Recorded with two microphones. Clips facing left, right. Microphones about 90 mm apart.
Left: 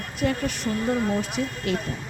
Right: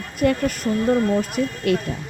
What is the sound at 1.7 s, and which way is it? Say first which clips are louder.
Speech: right 7 dB; 55° right (ahead or behind).